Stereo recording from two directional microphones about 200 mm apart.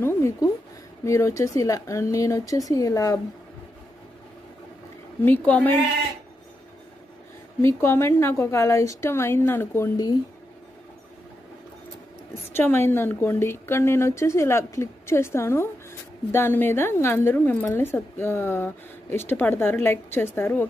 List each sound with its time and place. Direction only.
0.0 s a woman's voice: 15° left (ahead or behind)
5.2 s a woman's voice: 10° left (ahead or behind)
7.6 s a woman's voice: 15° left (ahead or behind)
12.5 s a woman's voice: 10° left (ahead or behind)